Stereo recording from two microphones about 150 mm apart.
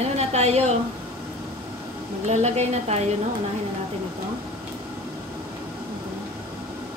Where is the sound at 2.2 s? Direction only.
45° right (ahead or behind).